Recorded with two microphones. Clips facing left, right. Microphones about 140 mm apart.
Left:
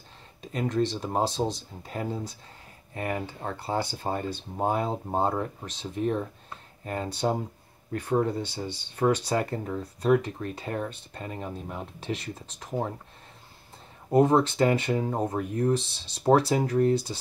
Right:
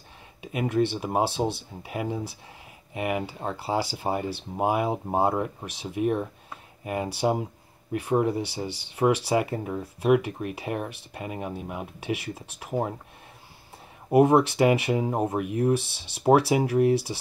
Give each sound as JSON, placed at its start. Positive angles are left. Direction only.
{"t": 0.4, "sound": "speech", "side_deg": -10}
{"t": 14.1, "sound": "speech", "side_deg": -10}
{"t": 15.8, "sound": "speech", "side_deg": -65}
{"t": 16.2, "sound": "speech", "side_deg": -10}
{"t": 16.9, "sound": "speech", "side_deg": -70}